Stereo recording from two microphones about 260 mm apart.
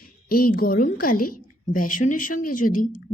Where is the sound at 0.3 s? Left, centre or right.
Left.